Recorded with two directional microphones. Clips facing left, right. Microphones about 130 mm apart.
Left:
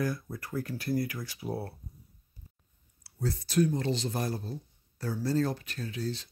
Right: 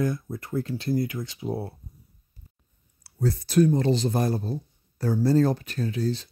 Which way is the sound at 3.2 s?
45° right (ahead or behind).